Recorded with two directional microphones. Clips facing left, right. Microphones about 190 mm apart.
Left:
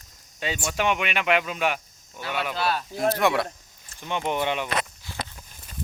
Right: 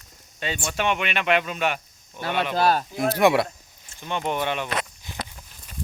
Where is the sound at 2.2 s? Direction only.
45° right (ahead or behind).